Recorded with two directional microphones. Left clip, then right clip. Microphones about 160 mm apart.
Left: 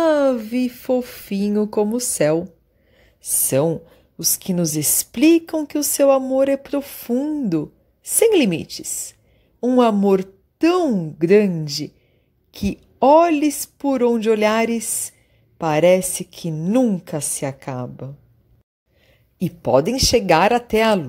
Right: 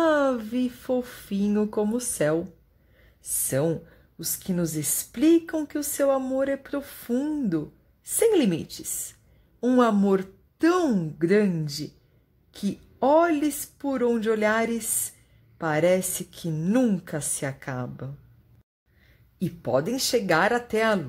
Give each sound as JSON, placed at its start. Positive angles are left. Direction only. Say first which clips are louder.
{"t": 0.0, "sound": "speech", "louder": "left 6 dB", "side_deg": 20}
{"t": 3.4, "sound": "speech", "louder": "left 7 dB", "side_deg": 25}
{"t": 7.2, "sound": "a woman's voice", "louder": "left 5 dB", "side_deg": 10}
{"t": 8.2, "sound": "speech", "louder": "left 6 dB", "side_deg": 25}
{"t": 10.9, "sound": "speech", "louder": "left 5 dB", "side_deg": 5}
{"t": 11.1, "sound": "a woman's voice", "louder": "left 8 dB", "side_deg": 20}
{"t": 16.5, "sound": "speech", "louder": "left 6 dB", "side_deg": 5}
{"t": 17.0, "sound": "a woman's voice", "louder": "left 6 dB", "side_deg": 20}
{"t": 19.4, "sound": "speech", "louder": "left 8 dB", "side_deg": 30}